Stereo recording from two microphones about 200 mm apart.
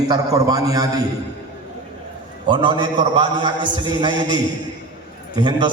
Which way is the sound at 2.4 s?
25° right (ahead or behind).